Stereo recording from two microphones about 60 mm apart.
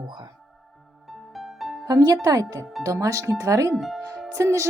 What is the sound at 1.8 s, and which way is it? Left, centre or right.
Speech, right.